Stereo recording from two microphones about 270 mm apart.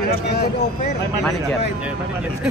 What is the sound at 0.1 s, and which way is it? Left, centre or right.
Speech, left.